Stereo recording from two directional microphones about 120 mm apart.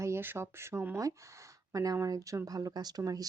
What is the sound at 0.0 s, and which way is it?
Speech, 20° right (ahead or behind).